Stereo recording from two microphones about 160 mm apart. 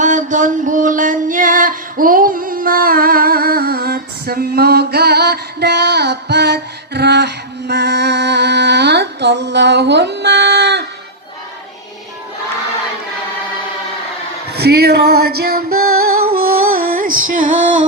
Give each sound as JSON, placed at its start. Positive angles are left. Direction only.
{"t": 0.0, "sound": "music", "side_deg": -50}
{"t": 14.5, "sound": "female singing", "side_deg": -90}